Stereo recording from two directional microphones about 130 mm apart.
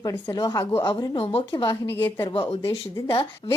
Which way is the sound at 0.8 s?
35° left (ahead or behind).